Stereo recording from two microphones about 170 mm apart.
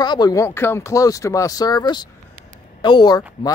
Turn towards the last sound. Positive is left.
turn(degrees=25)  # may be behind; listen again after turning